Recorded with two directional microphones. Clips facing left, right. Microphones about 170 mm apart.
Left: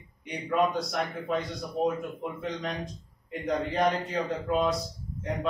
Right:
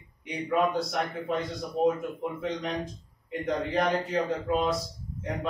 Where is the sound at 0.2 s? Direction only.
Centre (ahead or behind).